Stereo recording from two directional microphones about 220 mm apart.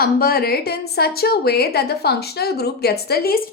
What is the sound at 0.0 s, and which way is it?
A woman's voice, 45° left (ahead or behind).